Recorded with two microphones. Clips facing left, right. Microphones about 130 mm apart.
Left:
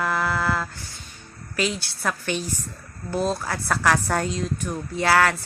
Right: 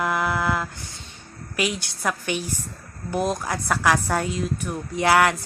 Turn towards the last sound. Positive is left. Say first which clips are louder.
# right 1 dB
turn(degrees=-20)  # may be behind; listen again after turning